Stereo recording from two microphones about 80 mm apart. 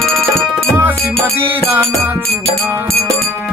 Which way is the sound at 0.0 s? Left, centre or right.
Centre.